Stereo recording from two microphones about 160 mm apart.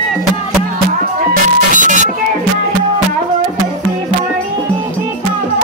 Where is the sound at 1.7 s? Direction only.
55° right (ahead or behind).